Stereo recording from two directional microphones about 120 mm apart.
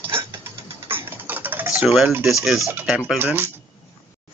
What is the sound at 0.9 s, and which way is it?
Typing, 15° right (ahead or behind).